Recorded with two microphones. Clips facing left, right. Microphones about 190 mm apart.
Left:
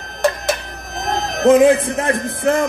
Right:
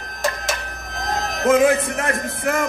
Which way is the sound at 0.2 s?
60° left (ahead or behind).